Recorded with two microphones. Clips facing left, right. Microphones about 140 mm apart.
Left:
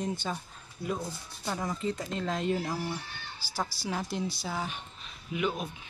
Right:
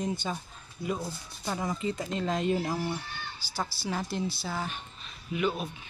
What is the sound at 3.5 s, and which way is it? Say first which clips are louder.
Speech: even; 10° left (ahead or behind).